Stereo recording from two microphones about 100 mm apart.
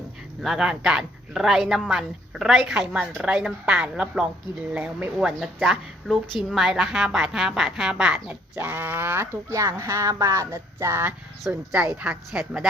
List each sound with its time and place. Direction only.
0.4 s a man's voice: 5° right (ahead or behind); by 11.1 s 25° right (ahead or behind)
11.5 s a woman's voice: 15° right (ahead or behind)